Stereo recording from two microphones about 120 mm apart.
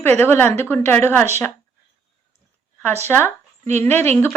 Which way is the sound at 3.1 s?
20° left (ahead or behind).